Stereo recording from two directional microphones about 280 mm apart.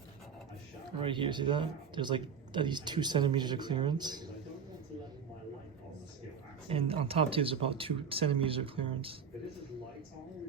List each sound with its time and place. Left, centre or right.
1.0 s speech: centre
6.7 s speech: centre